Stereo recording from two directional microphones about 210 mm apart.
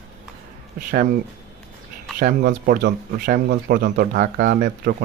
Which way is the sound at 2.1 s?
40° right (ahead or behind).